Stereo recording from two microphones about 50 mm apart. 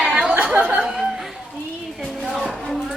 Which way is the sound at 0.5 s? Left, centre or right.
Right.